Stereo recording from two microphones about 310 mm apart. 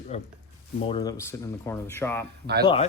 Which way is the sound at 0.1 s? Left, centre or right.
Left.